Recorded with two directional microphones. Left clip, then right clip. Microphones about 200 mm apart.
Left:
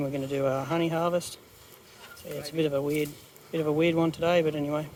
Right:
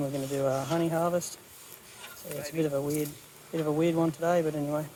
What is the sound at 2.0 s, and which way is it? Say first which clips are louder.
Bee: left 1 dB; 45° left (ahead or behind).